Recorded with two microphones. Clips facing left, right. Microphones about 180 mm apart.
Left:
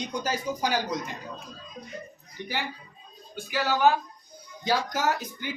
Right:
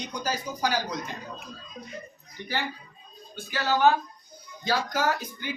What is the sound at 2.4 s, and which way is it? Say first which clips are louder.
Speech: right 1 dB; 15° left (ahead or behind).